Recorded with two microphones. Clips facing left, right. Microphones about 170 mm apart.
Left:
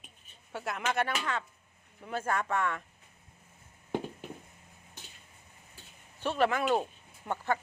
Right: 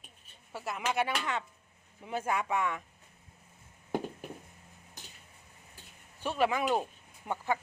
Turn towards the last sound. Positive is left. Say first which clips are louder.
# left 1 dB
turn(degrees=-10)  # may be behind; listen again after turning